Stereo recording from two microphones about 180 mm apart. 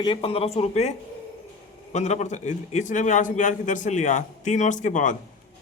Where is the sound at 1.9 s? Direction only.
40° left (ahead or behind).